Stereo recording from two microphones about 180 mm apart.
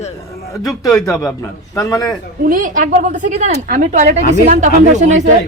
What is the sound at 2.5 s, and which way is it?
Speech, 50° right (ahead or behind).